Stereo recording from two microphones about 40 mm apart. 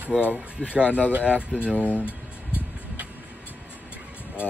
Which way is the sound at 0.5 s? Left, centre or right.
Right.